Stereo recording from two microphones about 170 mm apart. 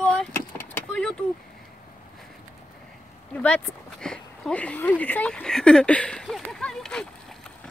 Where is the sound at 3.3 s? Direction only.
10° left (ahead or behind).